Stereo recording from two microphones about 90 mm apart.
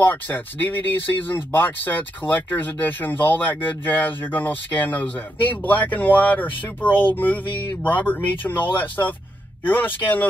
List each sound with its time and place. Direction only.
0.0 s speech: 20° left (ahead or behind)